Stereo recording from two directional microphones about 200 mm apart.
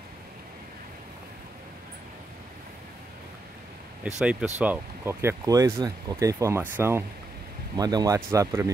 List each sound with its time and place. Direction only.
4.2 s speech: 5° right (ahead or behind)